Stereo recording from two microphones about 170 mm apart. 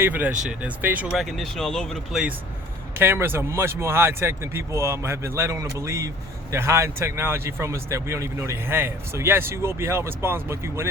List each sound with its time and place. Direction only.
0.0 s speech: 10° right (ahead or behind)
3.0 s speech: 15° right (ahead or behind)